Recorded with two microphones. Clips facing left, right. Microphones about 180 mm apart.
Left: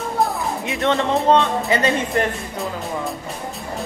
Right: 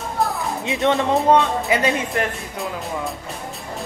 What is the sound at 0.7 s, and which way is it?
Speech, 20° right (ahead or behind).